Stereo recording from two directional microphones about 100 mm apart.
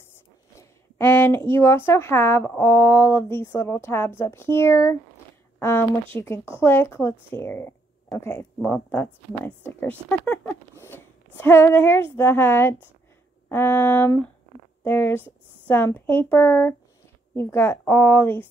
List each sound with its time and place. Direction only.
0.6 s speech: 25° left (ahead or behind)